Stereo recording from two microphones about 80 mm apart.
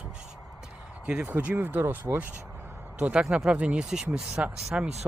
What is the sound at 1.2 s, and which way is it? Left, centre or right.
Speech, right.